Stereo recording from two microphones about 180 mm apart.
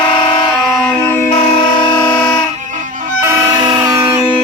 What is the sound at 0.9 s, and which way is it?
Music, 10° left (ahead or behind).